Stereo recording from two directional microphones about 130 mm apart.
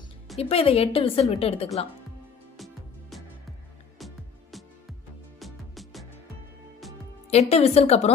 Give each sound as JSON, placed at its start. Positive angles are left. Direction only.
{"t": 0.4, "sound": "a woman's voice", "side_deg": 45}
{"t": 2.5, "sound": "music", "side_deg": 0}
{"t": 7.2, "sound": "a woman's voice", "side_deg": 55}